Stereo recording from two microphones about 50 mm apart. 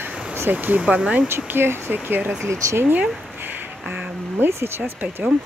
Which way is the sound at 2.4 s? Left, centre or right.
Right.